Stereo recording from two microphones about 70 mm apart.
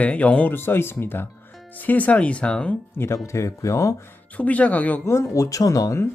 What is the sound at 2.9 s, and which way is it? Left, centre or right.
Speech, left.